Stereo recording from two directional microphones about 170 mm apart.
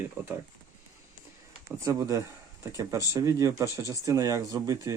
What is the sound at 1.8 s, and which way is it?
Speech, 20° right (ahead or behind).